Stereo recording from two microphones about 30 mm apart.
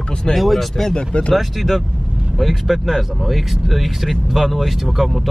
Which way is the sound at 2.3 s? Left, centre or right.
Centre.